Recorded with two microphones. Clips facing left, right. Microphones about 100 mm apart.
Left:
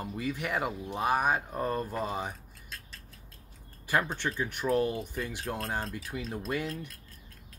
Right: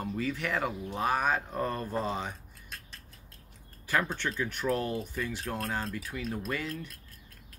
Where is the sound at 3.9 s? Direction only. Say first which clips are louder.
Left 1 dB; 15° left (ahead or behind).